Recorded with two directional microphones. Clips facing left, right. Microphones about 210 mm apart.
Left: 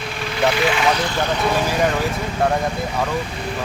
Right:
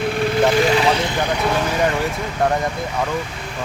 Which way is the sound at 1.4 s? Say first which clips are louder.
Left 1 dB; centre (ahead or behind).